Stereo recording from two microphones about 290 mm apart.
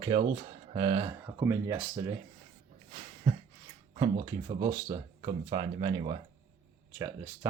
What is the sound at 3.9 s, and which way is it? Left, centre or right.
Speech, centre.